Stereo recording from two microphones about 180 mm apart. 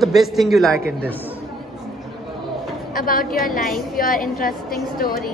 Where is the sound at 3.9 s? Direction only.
50° left (ahead or behind).